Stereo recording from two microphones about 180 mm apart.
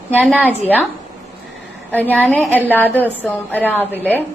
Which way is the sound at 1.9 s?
10° left (ahead or behind).